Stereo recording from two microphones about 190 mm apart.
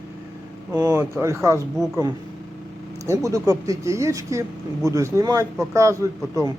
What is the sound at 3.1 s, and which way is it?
A man's voice, 15° right (ahead or behind).